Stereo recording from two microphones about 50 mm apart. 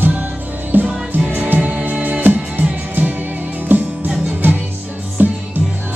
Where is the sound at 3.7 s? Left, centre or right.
Right.